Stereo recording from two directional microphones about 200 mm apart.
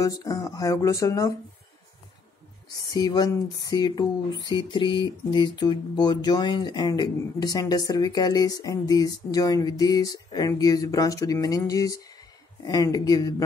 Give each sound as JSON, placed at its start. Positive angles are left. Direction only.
{"t": 0.0, "sound": "speech", "side_deg": 15}
{"t": 2.9, "sound": "speech", "side_deg": 20}